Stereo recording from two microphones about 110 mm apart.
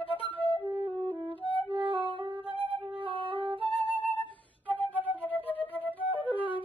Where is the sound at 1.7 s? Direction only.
50° right (ahead or behind).